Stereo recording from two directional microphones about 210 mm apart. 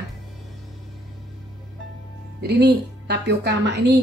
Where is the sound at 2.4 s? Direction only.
50° right (ahead or behind).